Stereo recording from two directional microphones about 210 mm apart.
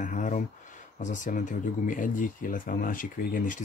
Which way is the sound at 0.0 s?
35° left (ahead or behind).